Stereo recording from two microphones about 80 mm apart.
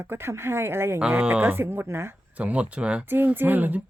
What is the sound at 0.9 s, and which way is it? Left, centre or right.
A woman's voice, centre.